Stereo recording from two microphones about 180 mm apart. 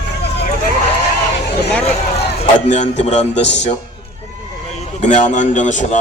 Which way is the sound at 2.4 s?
40° left (ahead or behind).